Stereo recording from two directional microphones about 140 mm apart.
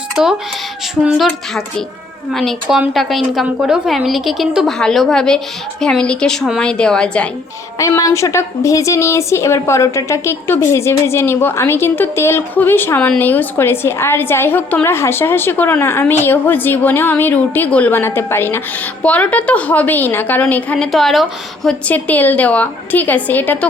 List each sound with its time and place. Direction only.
0.2 s a woman's voice: 5° right (ahead or behind)
2.3 s a woman's voice: centre (ahead or behind)
7.8 s a woman's voice: 25° left (ahead or behind)